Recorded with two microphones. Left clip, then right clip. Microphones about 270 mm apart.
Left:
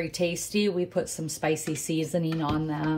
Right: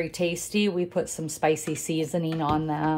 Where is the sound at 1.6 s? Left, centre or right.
Centre.